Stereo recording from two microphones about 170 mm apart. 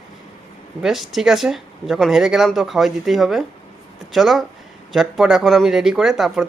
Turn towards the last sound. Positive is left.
turn(degrees=0)  # may be behind; listen again after turning